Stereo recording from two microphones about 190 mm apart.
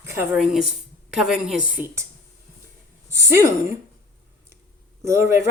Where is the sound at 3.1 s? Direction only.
15° right (ahead or behind).